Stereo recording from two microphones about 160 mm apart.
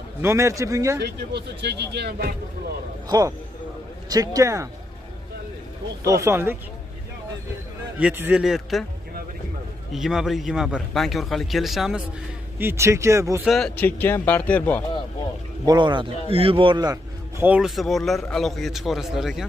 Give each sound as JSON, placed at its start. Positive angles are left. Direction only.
{"t": 0.2, "sound": "speech", "side_deg": -15}
{"t": 1.0, "sound": "speech", "side_deg": -90}
{"t": 3.1, "sound": "a man's voice", "side_deg": -25}
{"t": 6.0, "sound": "speech", "side_deg": -15}
{"t": 8.0, "sound": "a man's voice", "side_deg": -10}
{"t": 9.9, "sound": "a man's voice", "side_deg": 0}
{"t": 12.5, "sound": "speech", "side_deg": -15}
{"t": 13.5, "sound": "speech", "side_deg": 5}
{"t": 15.6, "sound": "a man's voice", "side_deg": -25}
{"t": 17.4, "sound": "a man's voice", "side_deg": -5}